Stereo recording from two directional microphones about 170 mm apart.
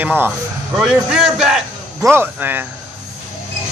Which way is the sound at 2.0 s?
15° right (ahead or behind).